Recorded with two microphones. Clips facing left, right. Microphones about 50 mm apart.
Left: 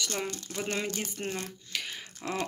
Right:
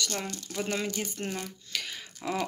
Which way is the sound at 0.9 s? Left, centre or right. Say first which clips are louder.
Right 1 dB; centre.